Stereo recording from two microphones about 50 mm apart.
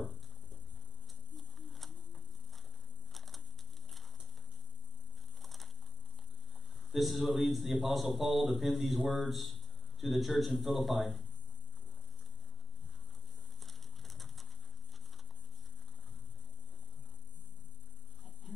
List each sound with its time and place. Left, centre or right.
1.3 s a sound: centre
3.1 s crushing: centre
5.4 s crushing: centre
6.9 s a man's voice: centre
13.7 s pigeon: centre